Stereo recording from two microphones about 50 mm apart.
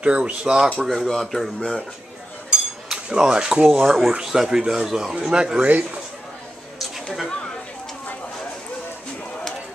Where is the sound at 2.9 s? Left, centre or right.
Centre.